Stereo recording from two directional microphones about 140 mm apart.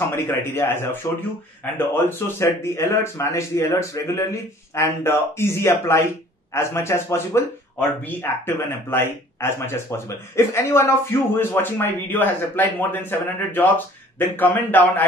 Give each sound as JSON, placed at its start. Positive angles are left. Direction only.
{"t": 0.1, "sound": "speech", "side_deg": 15}